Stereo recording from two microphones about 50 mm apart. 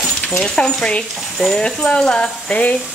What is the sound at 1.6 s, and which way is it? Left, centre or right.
Speech, centre.